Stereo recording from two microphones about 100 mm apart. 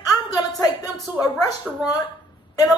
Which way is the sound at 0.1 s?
40° left (ahead or behind).